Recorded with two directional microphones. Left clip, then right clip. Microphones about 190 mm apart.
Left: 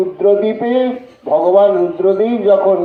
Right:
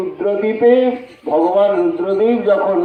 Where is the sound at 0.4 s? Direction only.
50° left (ahead or behind).